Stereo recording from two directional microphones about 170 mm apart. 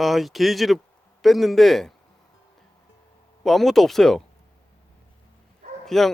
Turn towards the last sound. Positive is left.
turn(degrees=0)  # may be behind; listen again after turning